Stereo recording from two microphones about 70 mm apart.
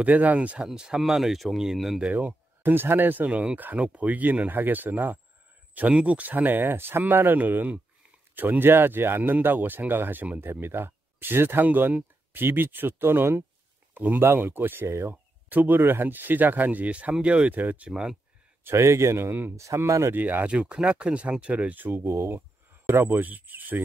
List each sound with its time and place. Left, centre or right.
0.0 s speech: right
0.7 s speech: centre
2.1 s speech: right
17.8 s speech: centre
18.6 s speech: right
19.5 s speech: right
20.2 s speech: right
20.5 s speech: centre